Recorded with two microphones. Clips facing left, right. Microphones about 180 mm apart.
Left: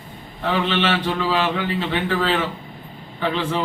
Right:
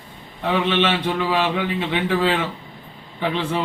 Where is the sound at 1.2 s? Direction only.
15° right (ahead or behind).